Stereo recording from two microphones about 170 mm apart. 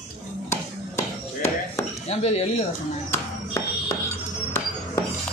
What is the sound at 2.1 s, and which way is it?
Speech, 40° left (ahead or behind).